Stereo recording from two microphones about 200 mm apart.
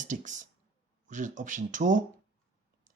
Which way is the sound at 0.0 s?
40° right (ahead or behind).